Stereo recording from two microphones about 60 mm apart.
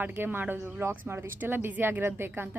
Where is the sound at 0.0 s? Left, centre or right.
Right.